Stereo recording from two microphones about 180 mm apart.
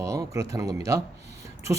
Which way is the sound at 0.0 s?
15° right (ahead or behind).